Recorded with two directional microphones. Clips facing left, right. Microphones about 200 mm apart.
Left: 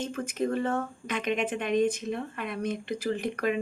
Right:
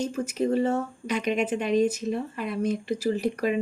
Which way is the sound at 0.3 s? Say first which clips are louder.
Right 4 dB; 55° left (ahead or behind).